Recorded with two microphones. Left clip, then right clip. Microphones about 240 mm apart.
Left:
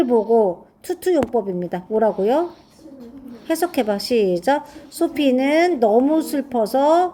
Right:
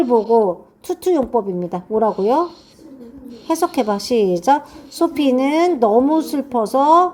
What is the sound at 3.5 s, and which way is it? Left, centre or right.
Speech, right.